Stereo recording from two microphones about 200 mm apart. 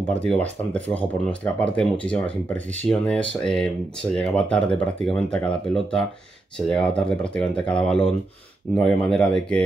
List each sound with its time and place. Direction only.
0.1 s speech: 5° left (ahead or behind)